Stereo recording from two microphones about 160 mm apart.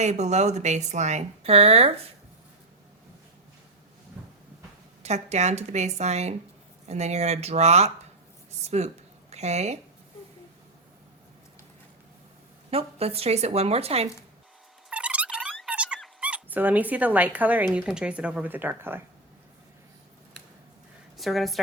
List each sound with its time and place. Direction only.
0.0 s speech: 45° right (ahead or behind)
5.0 s speech: 45° right (ahead or behind)
12.7 s a woman's voice: 40° right (ahead or behind)
14.8 s a sound: 5° right (ahead or behind)
15.5 s dog: 5° right (ahead or behind)
17.7 s speech: 5° right (ahead or behind)
21.2 s a woman's voice: centre (ahead or behind)